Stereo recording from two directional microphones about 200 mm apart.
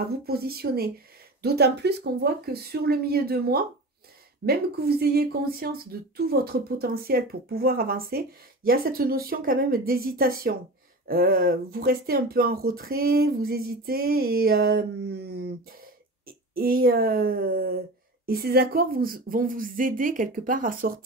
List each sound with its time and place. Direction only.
0.2 s speech: 50° right (ahead or behind)